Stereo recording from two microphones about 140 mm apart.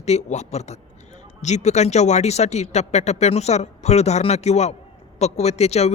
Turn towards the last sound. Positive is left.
turn(degrees=50)  # may be behind; listen again after turning